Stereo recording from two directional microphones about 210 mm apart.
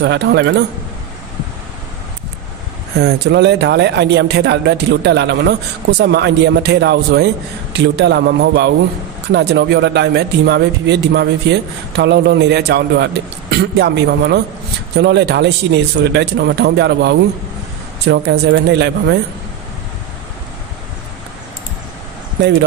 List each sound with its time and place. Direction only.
0.0 s speech: 55° right (ahead or behind)
3.0 s speech: 55° right (ahead or behind)